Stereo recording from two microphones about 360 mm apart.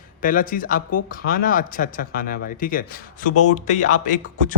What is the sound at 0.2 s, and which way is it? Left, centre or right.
Speech, left.